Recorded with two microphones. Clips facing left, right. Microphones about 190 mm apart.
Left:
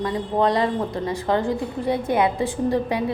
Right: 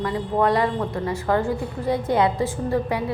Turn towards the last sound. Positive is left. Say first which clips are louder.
# left 1 dB
turn(degrees=15)  # may be behind; listen again after turning